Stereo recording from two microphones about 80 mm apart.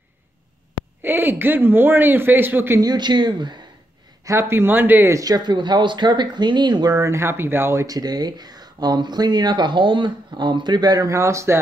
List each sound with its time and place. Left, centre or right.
1.0 s a man's voice: right
2.8 s speech: right
4.2 s a man's voice: right
5.1 s speech: right
5.4 s speech: right
7.0 s speech: right
7.8 s speech: right
11.1 s speech: right